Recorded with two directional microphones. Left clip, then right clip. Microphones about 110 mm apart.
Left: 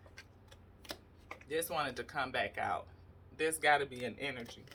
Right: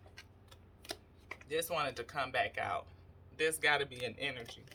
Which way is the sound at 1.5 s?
15° right (ahead or behind).